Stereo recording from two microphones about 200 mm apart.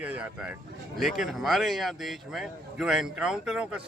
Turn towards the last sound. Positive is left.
turn(degrees=-5)  # may be behind; listen again after turning